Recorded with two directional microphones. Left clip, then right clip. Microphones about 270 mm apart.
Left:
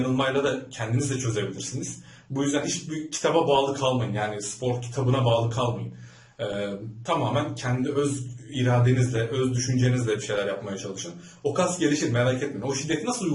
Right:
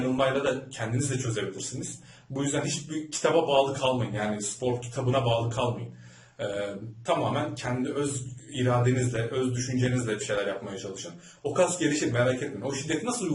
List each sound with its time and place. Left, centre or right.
0.2 s a man's voice: centre